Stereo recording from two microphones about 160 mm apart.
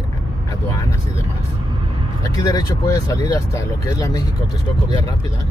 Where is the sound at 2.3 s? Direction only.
20° left (ahead or behind).